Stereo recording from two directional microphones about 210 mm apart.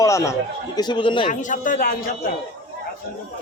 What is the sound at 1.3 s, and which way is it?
Speech, 40° left (ahead or behind).